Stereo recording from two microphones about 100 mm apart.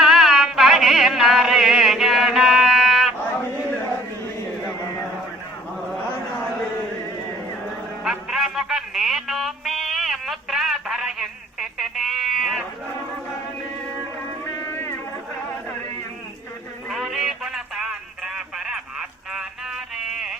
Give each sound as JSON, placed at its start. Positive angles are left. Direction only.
{"t": 0.0, "sound": "music", "side_deg": -5}
{"t": 8.0, "sound": "music", "side_deg": -5}
{"t": 14.5, "sound": "music", "side_deg": 25}
{"t": 16.9, "sound": "a sound", "side_deg": 0}